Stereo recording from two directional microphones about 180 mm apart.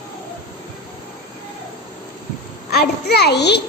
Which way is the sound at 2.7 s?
60° left (ahead or behind).